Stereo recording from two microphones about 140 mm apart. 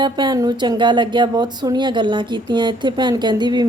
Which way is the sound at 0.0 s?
30° right (ahead or behind).